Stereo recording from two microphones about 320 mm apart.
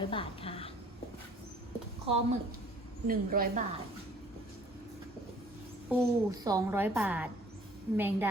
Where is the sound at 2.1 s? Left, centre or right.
Centre.